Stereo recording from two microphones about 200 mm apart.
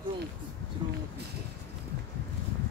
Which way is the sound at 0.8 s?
25° right (ahead or behind).